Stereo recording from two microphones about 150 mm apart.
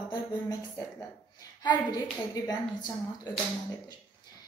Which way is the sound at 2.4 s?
25° left (ahead or behind).